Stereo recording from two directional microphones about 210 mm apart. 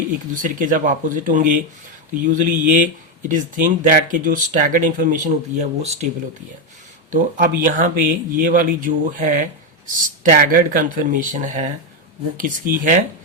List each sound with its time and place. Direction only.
0.4 s speech: 40° right (ahead or behind)
7.1 s speech: 40° right (ahead or behind)